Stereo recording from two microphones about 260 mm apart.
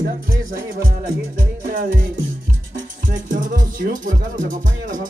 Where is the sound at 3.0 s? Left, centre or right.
Right.